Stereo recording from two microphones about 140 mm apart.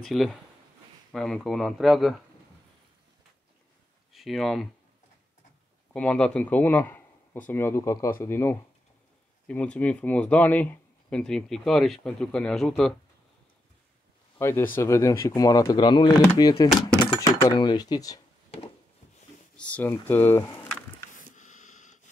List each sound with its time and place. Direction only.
0.0 s speech: centre (ahead or behind)
4.1 s speech: centre (ahead or behind)
5.9 s speech: 5° left (ahead or behind)
14.4 s speech: 15° left (ahead or behind)
19.5 s speech: 10° left (ahead or behind)
21.1 s a sound: 65° left (ahead or behind)